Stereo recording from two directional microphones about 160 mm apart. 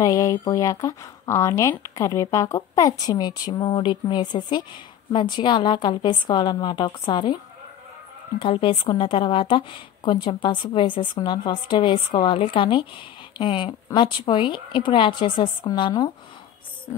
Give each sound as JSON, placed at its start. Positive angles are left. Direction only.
{"t": 0.0, "sound": "speech", "side_deg": 20}
{"t": 8.4, "sound": "a woman's voice", "side_deg": 35}